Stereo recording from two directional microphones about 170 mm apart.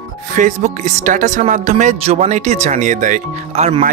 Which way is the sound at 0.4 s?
45° right (ahead or behind).